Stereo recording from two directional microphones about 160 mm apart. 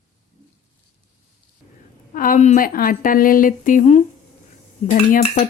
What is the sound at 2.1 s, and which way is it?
A woman's voice, 60° left (ahead or behind).